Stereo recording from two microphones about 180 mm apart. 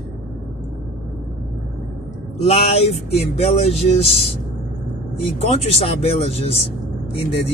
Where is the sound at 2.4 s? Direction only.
35° left (ahead or behind).